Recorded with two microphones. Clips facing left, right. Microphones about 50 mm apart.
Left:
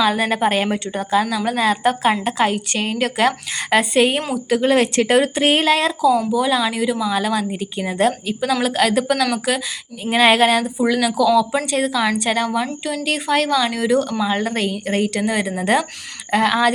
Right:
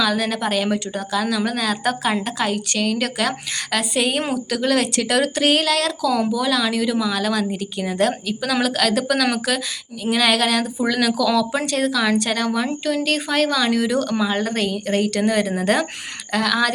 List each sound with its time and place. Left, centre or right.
0.0 s a woman's voice: left
2.7 s a woman's voice: left
3.0 s speech: centre
3.8 s a woman's voice: left; by 9.6 s centre
10.0 s a woman's voice: left
10.6 s speech: centre
16.3 s a woman's voice: left